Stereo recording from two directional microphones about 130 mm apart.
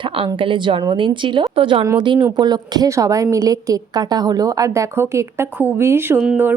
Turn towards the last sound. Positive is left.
turn(degrees=-15)  # may be behind; listen again after turning